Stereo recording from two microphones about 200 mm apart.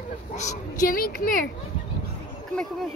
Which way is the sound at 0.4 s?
40° left (ahead or behind).